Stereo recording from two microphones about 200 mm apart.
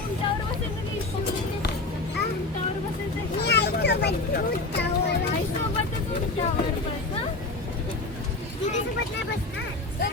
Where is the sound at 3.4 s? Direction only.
55° left (ahead or behind).